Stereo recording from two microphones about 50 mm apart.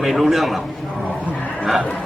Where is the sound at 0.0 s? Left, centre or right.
Centre.